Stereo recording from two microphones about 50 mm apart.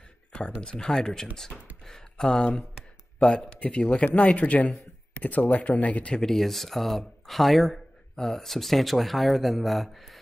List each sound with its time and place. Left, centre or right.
0.6 s a man's voice: centre
6.2 s speech: centre